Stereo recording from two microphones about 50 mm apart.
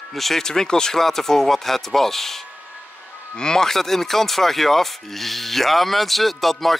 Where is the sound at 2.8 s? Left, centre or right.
Left.